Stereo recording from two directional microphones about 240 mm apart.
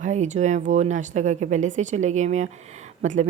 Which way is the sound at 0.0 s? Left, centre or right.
Right.